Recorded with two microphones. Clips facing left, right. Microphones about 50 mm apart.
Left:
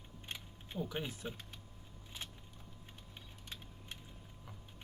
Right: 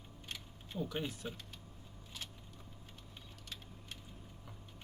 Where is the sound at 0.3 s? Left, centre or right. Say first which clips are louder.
Left 1 dB; left.